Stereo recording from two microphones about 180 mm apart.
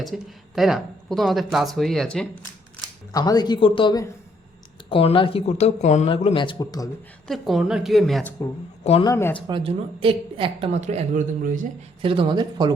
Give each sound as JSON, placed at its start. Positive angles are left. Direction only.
{"t": 0.0, "sound": "speech", "side_deg": 0}
{"t": 3.1, "sound": "speech", "side_deg": 20}
{"t": 7.3, "sound": "speech", "side_deg": 0}
{"t": 8.8, "sound": "speech", "side_deg": 35}
{"t": 9.0, "sound": "speech", "side_deg": 15}
{"t": 9.5, "sound": "speech", "side_deg": -30}
{"t": 12.0, "sound": "speech", "side_deg": -30}